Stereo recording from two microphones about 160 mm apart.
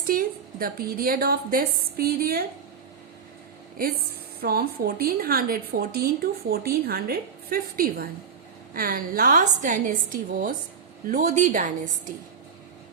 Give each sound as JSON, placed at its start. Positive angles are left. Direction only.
{"t": 0.0, "sound": "a woman's voice", "side_deg": -65}
{"t": 4.4, "sound": "a woman's voice", "side_deg": -70}